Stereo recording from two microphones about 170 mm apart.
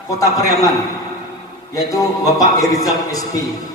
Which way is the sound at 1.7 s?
20° left (ahead or behind).